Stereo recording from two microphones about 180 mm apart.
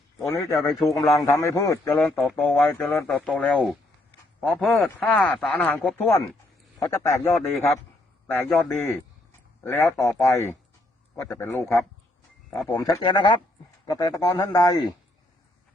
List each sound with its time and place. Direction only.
0.3 s speech: 15° left (ahead or behind)
0.6 s a man's voice: centre (ahead or behind)
1.2 s speech: 15° left (ahead or behind)
6.7 s speech: 20° left (ahead or behind)
9.6 s speech: 15° left (ahead or behind)